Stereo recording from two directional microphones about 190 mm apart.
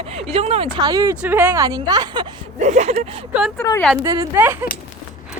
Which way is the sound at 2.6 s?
35° right (ahead or behind).